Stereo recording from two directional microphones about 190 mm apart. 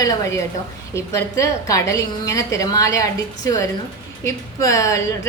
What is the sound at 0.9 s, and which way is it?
A woman's voice, 15° left (ahead or behind).